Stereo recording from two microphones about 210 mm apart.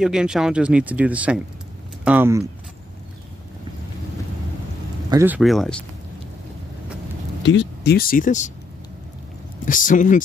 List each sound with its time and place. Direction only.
0.0 s speech: 5° right (ahead or behind)
5.1 s speech: 10° right (ahead or behind)
7.4 s speech: 55° left (ahead or behind); by 8.5 s 35° left (ahead or behind)
9.7 s speech: 40° left (ahead or behind)